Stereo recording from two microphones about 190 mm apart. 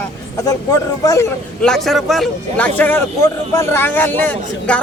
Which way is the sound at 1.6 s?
5° left (ahead or behind).